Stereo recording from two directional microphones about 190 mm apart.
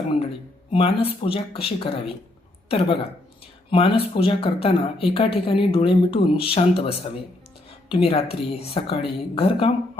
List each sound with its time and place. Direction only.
0.7 s a woman's voice: 30° left (ahead or behind)
3.4 s a sound: 25° left (ahead or behind)
4.1 s speech: 30° left (ahead or behind)